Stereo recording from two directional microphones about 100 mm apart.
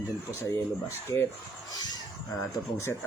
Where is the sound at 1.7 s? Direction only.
40° left (ahead or behind).